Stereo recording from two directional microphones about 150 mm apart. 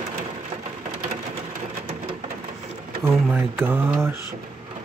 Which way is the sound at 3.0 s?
15° right (ahead or behind).